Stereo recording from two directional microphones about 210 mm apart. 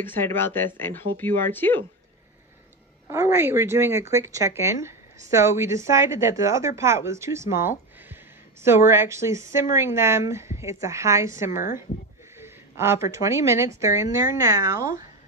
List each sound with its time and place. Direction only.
0.0 s speech: 10° left (ahead or behind)
3.1 s a woman's voice: 10° right (ahead or behind)
7.5 s a sound: 10° right (ahead or behind)
8.6 s a woman's voice: 10° right (ahead or behind)
11.5 s speech: 40° left (ahead or behind)
12.4 s a woman's voice: 10° right (ahead or behind)
14.8 s speech: 40° left (ahead or behind)